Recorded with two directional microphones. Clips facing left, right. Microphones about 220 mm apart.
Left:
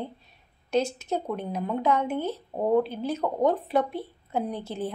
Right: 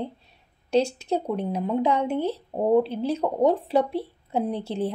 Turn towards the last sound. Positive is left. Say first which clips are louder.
# right 4 dB
turn(degrees=-30)  # may be behind; listen again after turning